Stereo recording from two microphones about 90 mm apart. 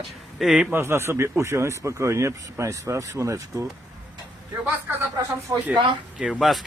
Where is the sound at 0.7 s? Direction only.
30° right (ahead or behind).